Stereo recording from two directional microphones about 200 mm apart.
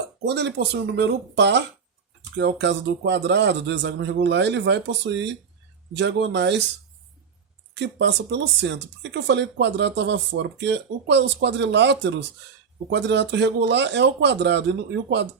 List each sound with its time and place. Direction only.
0.3 s speech: 55° right (ahead or behind)
7.7 s speech: 60° right (ahead or behind)